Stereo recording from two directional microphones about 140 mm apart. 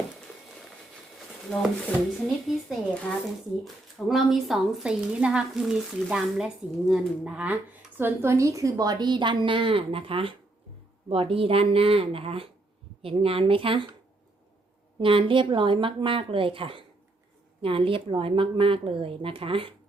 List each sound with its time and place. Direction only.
1.5 s a woman's voice: 5° left (ahead or behind); by 13.8 s 40° right (ahead or behind)
14.9 s a woman's voice: 40° right (ahead or behind)